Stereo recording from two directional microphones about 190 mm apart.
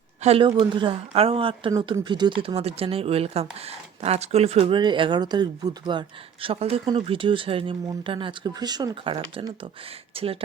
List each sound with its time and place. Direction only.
0.2 s speech: 30° right (ahead or behind)